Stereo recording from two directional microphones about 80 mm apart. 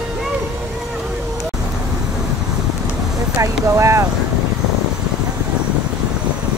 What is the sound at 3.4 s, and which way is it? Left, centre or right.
Speech, right.